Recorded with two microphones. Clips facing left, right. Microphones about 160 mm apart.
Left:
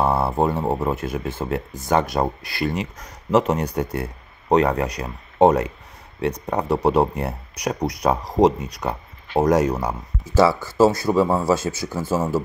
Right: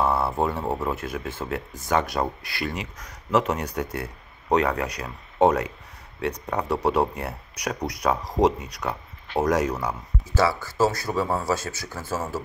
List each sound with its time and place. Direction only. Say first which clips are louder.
0.0 s speech: left 3 dB; 30° left (ahead or behind)
9.3 s speech: left 5 dB; 35° left (ahead or behind)